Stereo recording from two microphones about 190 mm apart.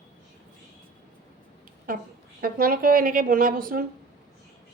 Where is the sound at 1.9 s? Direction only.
45° right (ahead or behind).